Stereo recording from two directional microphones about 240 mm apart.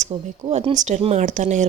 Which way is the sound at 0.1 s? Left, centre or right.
Right.